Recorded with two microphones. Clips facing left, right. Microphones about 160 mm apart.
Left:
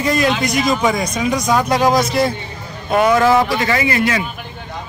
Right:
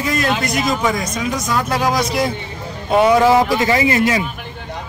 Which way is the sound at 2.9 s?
10° right (ahead or behind).